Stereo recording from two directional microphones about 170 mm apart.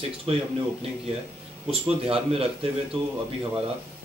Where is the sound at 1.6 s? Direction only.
35° right (ahead or behind).